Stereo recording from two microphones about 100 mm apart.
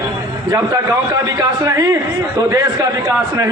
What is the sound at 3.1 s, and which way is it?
Speech, 35° right (ahead or behind).